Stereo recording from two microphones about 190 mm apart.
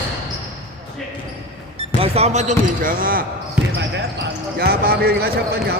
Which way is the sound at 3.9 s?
60° right (ahead or behind).